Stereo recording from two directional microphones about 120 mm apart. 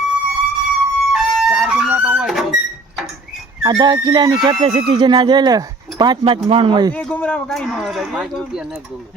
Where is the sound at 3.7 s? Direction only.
40° right (ahead or behind).